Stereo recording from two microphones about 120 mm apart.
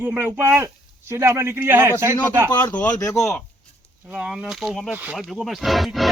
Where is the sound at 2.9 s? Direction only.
30° left (ahead or behind).